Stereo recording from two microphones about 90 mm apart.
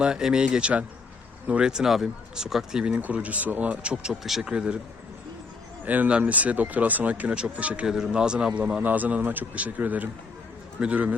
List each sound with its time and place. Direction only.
0.0 s speech: 10° right (ahead or behind)
2.9 s speech: 15° right (ahead or behind)
5.8 s speech: 20° right (ahead or behind)